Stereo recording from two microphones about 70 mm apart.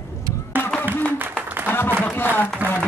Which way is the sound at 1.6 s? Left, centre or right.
Left.